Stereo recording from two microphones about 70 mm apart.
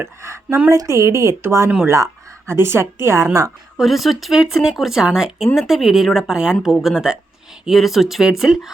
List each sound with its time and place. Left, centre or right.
0.0 s a woman's voice: right
3.8 s speech: centre